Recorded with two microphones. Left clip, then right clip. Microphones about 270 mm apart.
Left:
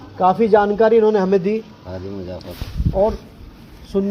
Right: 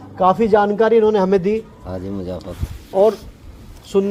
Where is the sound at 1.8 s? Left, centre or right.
Right.